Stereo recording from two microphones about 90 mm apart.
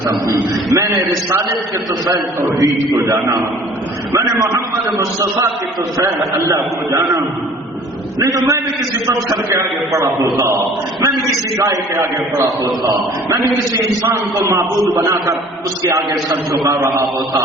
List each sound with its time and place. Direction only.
0.1 s a man's voice: 40° right (ahead or behind)
2.4 s a man's voice: 40° right (ahead or behind)
4.1 s a man's voice: 35° right (ahead or behind)
8.2 s a man's voice: 35° right (ahead or behind)
14.1 s a man's voice: 30° right (ahead or behind)